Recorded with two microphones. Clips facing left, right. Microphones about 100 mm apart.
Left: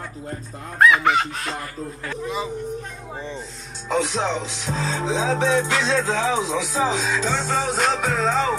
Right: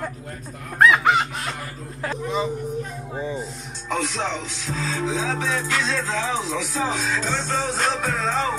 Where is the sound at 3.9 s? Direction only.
20° left (ahead or behind).